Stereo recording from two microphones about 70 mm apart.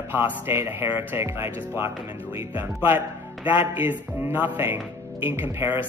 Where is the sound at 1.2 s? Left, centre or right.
Right.